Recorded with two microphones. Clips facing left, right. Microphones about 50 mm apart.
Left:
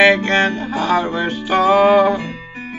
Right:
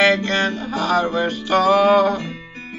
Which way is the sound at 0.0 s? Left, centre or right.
Left.